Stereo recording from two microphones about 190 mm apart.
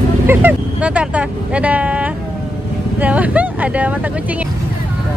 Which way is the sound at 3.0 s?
5° right (ahead or behind).